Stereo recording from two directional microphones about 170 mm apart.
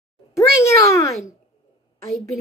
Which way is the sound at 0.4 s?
15° left (ahead or behind).